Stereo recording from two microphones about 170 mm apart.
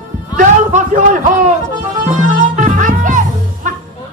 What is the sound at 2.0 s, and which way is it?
Music, 50° right (ahead or behind).